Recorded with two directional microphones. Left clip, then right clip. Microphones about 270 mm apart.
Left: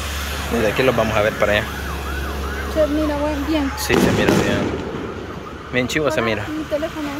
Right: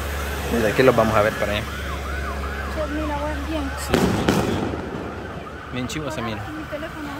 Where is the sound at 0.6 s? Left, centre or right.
Centre.